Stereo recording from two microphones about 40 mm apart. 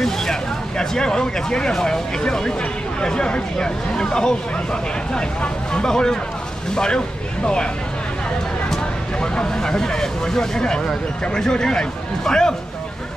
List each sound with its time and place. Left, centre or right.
0.0 s speech: centre
9.2 s speech: left